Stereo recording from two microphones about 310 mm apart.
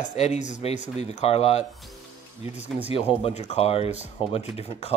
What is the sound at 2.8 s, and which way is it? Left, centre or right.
Speech, centre.